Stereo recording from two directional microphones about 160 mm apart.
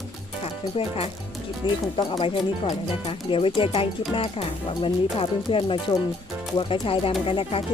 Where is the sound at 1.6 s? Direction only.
30° left (ahead or behind).